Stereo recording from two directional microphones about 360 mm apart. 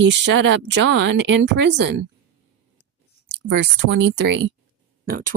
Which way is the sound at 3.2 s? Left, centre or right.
Right.